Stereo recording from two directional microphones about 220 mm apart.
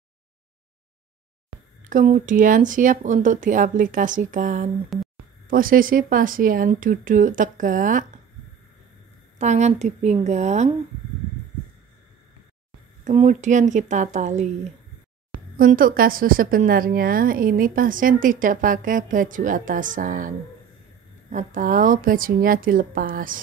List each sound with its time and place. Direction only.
1.9 s a woman's voice: 35° right (ahead or behind)
9.4 s a woman's voice: 30° right (ahead or behind)
13.0 s a woman's voice: 35° right (ahead or behind)
15.5 s a woman's voice: 40° right (ahead or behind)